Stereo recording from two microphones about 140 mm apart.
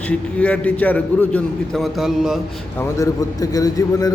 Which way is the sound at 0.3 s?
10° left (ahead or behind).